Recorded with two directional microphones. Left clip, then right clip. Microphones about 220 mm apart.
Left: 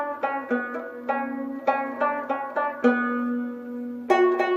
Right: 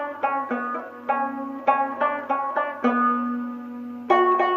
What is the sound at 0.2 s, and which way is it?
Music, 45° left (ahead or behind).